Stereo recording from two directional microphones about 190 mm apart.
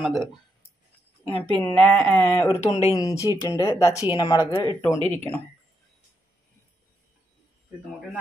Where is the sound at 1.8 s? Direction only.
5° left (ahead or behind).